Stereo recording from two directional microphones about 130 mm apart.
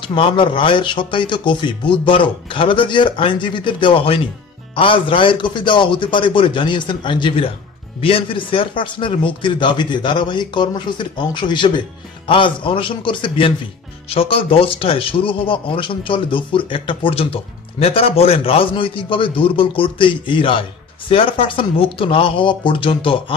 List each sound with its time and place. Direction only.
0.1 s a man's voice: 40° left (ahead or behind)